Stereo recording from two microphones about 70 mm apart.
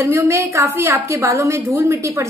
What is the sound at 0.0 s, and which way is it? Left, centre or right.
A woman's voice, right.